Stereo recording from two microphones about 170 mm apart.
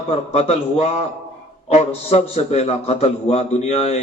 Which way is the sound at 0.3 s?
40° left (ahead or behind).